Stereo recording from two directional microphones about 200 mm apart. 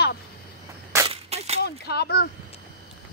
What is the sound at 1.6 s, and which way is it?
Speech, 55° left (ahead or behind).